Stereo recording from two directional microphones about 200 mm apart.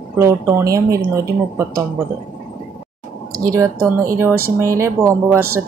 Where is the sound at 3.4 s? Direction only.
15° right (ahead or behind).